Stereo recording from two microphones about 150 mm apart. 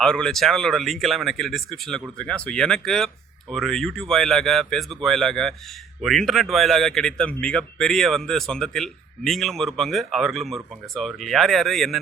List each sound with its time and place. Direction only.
0.0 s speech: 5° left (ahead or behind)